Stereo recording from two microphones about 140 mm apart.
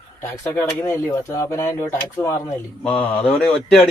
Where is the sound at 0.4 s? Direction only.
15° left (ahead or behind).